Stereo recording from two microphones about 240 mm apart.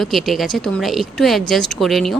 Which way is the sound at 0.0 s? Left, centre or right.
Centre.